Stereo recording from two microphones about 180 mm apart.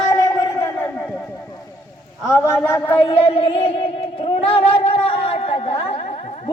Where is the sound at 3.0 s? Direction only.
30° left (ahead or behind).